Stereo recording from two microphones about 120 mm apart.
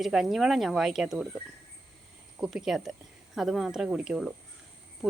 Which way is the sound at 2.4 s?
5° right (ahead or behind).